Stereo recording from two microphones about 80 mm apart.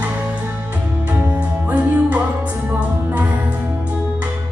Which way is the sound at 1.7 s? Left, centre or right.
Centre.